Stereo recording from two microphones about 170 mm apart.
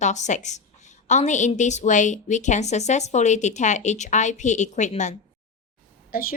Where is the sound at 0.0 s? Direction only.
45° left (ahead or behind).